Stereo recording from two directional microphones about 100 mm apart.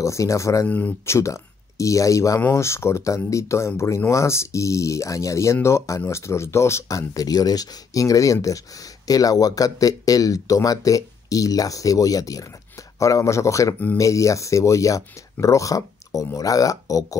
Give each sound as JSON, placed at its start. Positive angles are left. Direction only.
{"t": 0.0, "sound": "speech", "side_deg": 30}
{"t": 0.7, "sound": "speech", "side_deg": 15}
{"t": 1.1, "sound": "speech", "side_deg": 30}